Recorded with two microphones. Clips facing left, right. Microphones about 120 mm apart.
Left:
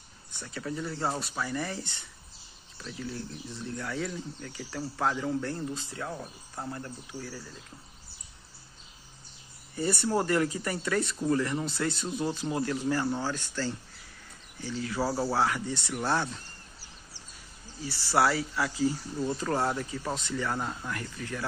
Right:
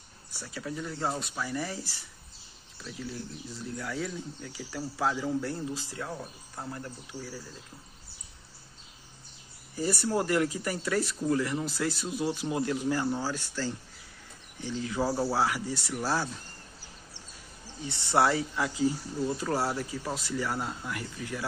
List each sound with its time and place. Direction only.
0.3 s speech: 5° right (ahead or behind)
6.8 s speech: 5° right (ahead or behind)
9.8 s speech: centre (ahead or behind)
12.4 s speech: 15° right (ahead or behind)
17.8 s speech: 25° right (ahead or behind)